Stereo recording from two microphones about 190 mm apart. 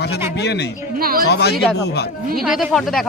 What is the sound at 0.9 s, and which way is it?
Speech, 50° right (ahead or behind).